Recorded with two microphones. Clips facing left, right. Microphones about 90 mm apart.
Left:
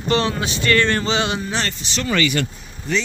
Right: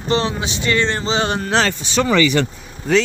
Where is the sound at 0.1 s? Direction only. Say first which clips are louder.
Right 1 dB; 25° right (ahead or behind).